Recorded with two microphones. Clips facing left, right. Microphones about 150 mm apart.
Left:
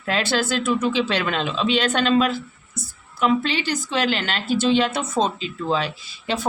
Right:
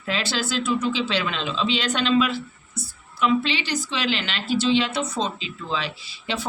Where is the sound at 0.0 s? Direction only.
55° left (ahead or behind).